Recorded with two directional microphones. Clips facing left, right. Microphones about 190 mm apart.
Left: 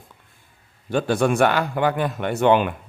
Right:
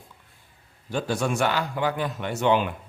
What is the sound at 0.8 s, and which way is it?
A man's voice, 60° left (ahead or behind).